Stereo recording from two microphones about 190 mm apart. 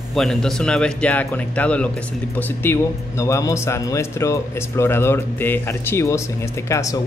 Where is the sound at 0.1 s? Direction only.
Centre (ahead or behind).